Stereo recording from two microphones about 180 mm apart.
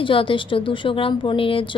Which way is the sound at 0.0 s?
30° left (ahead or behind).